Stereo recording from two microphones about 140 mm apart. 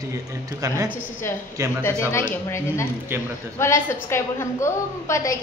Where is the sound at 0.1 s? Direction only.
25° right (ahead or behind).